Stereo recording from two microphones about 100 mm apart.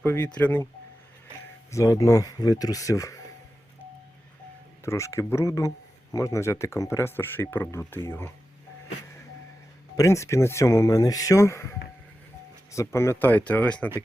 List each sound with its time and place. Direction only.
0.0 s speech: 20° left (ahead or behind)
1.7 s speech: 35° left (ahead or behind)
4.9 s speech: 30° left (ahead or behind)
10.0 s speech: 30° left (ahead or behind)
12.7 s speech: 30° left (ahead or behind); by 13.9 s 15° left (ahead or behind)